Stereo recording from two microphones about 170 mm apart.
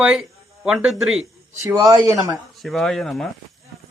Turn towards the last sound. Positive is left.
turn(degrees=0)  # may be behind; listen again after turning